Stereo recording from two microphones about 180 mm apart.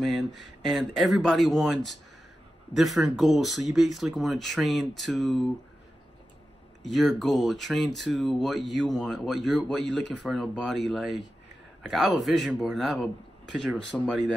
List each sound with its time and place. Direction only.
0.0 s speech: centre (ahead or behind)
6.8 s speech: centre (ahead or behind)